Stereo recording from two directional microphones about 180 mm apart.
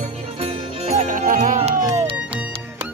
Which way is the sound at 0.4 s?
35° right (ahead or behind).